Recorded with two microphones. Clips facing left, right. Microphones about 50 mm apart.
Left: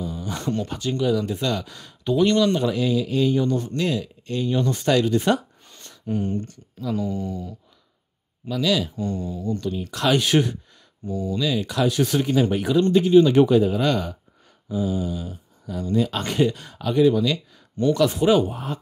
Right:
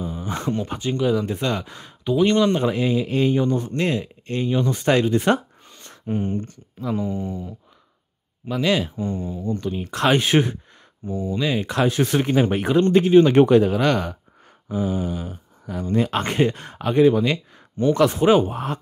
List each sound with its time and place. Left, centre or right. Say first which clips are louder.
0.0 s speech: right 2 dB; right
2.3 s speech: right 1 dB; right
4.5 s speech: right 1 dB; centre
4.8 s speech: right 1 dB; right
5.7 s a sound: right 1 dB; centre
8.5 s speech: right 1 dB; right
8.9 s speech: right 1 dB; right
13.6 s speech: right 2 dB; right
14.7 s speech: right 1 dB; right
18.5 s speech: right 3 dB; right